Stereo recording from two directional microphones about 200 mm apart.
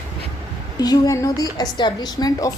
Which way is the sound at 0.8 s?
15° left (ahead or behind).